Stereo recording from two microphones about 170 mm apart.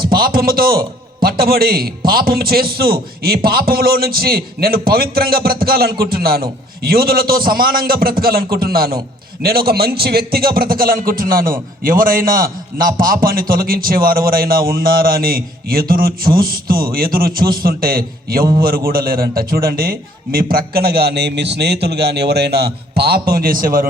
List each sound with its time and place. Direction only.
0.0 s a man's voice: 60° right (ahead or behind)